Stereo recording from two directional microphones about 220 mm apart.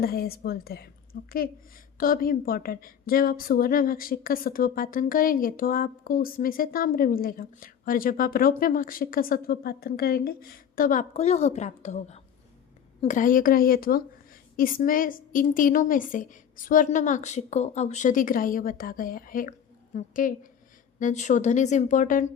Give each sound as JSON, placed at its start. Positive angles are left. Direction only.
{"t": 0.0, "sound": "a woman's voice", "side_deg": 45}